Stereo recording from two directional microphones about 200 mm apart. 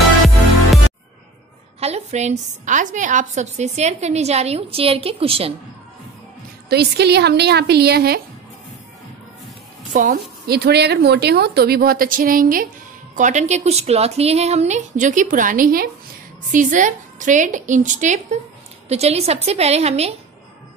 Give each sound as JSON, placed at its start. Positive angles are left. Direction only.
{"t": 1.8, "sound": "a woman's voice", "side_deg": -35}
{"t": 6.7, "sound": "a woman's voice", "side_deg": -55}
{"t": 9.9, "sound": "a woman's voice", "side_deg": -45}